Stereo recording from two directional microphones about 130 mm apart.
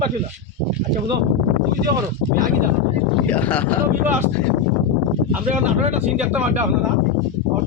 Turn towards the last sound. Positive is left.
turn(degrees=-10)  # may be behind; listen again after turning